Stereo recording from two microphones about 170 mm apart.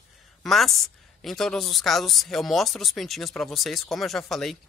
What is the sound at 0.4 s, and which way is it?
A woman's voice, centre (ahead or behind).